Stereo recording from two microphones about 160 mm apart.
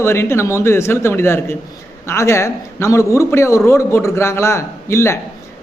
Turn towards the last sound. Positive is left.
turn(degrees=15)  # may be behind; listen again after turning